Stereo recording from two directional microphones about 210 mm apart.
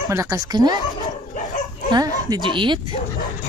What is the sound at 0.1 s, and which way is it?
Speech, 15° right (ahead or behind).